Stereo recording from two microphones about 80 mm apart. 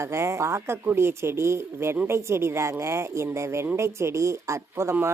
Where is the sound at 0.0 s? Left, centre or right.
Right.